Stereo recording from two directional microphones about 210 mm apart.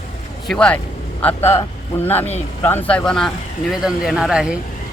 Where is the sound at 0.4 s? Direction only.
5° left (ahead or behind).